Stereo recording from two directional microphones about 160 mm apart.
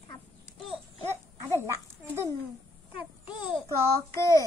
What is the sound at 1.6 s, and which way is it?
Children playing, 15° right (ahead or behind).